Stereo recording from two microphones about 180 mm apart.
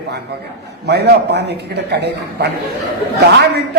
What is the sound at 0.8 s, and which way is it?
A man's voice, 65° right (ahead or behind).